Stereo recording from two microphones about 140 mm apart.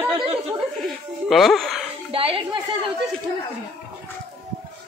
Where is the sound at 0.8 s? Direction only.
Centre (ahead or behind).